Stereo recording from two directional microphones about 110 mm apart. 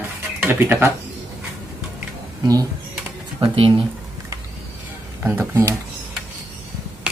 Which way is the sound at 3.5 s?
55° right (ahead or behind).